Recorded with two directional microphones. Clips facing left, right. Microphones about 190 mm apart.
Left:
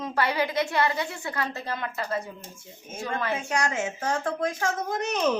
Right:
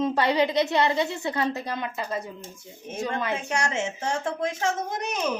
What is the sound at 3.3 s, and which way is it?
Speech, 25° right (ahead or behind).